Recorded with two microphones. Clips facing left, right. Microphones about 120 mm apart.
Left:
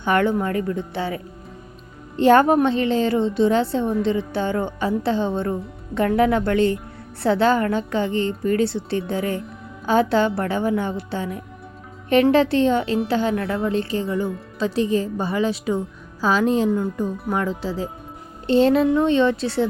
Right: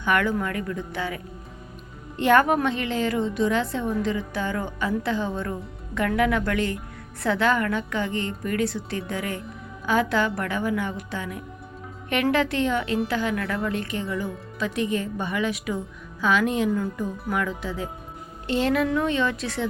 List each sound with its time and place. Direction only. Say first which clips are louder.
0.0 s a woman's voice: left 4 dB; 30° left (ahead or behind)